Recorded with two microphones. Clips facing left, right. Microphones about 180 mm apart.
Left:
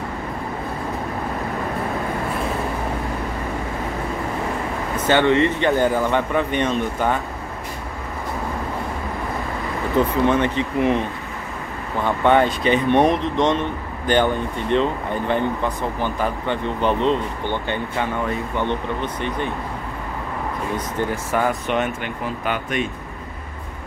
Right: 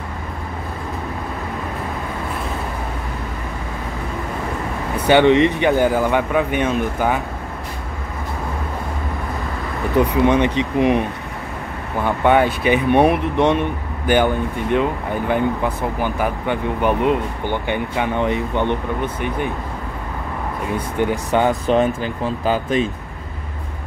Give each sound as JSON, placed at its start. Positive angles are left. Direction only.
{"t": 4.9, "sound": "speech", "side_deg": -15}
{"t": 9.9, "sound": "speech", "side_deg": -15}
{"t": 20.7, "sound": "speech", "side_deg": -20}